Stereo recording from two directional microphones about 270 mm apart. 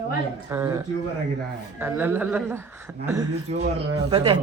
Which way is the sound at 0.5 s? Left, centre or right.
Centre.